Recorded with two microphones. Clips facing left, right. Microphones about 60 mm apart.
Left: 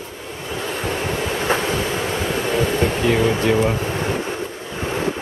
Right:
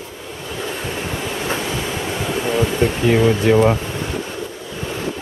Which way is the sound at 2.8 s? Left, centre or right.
Centre.